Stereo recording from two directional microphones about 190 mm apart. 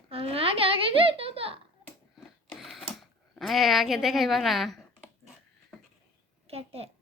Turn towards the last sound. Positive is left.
turn(degrees=-30)  # may be behind; listen again after turning